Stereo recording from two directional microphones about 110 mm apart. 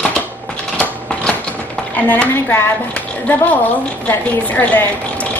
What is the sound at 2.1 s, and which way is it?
Speech, 15° left (ahead or behind).